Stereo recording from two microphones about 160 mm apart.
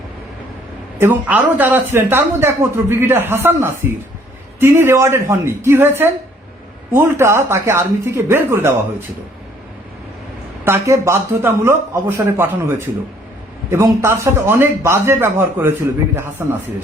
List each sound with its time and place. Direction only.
0.9 s speech: 10° right (ahead or behind)
10.7 s speech: 15° right (ahead or behind)